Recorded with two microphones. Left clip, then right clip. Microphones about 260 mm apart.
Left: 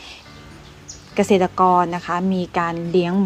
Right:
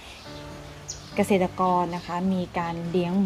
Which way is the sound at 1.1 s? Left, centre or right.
Centre.